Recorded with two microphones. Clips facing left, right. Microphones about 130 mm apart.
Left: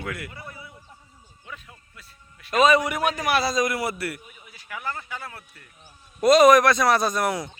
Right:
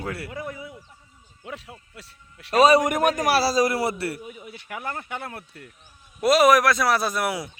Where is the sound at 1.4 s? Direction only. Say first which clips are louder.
Right 6 dB; 80° right.